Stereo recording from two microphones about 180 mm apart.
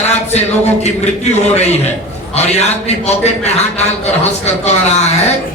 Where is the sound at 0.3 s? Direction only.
35° left (ahead or behind).